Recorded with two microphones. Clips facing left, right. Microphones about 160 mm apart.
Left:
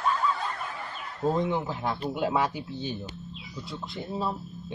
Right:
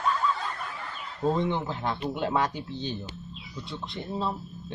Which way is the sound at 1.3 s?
5° left (ahead or behind).